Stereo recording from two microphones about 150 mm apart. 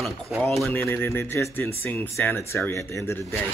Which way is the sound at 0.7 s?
15° left (ahead or behind).